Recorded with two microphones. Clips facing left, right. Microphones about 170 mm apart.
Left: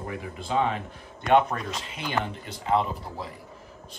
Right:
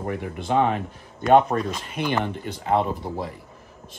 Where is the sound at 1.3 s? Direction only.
40° right (ahead or behind).